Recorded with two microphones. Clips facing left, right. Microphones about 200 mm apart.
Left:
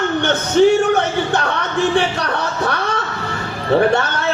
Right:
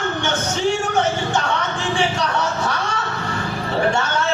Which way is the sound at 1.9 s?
60° left (ahead or behind).